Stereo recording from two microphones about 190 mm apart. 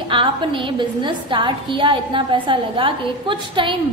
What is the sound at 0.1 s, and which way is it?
A woman's voice, 25° right (ahead or behind).